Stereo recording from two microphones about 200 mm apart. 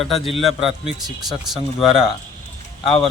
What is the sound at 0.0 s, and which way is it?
Speech, centre (ahead or behind).